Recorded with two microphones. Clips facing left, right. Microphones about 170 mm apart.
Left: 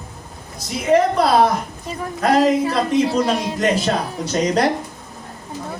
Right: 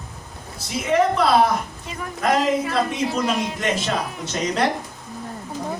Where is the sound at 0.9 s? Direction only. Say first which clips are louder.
Left 3 dB; 35° left (ahead or behind).